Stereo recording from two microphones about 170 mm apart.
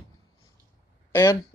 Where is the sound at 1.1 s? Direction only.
15° left (ahead or behind).